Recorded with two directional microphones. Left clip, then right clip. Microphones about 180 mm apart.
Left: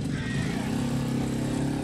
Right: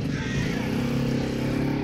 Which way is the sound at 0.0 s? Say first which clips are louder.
Right 3 dB; 55° left (ahead or behind).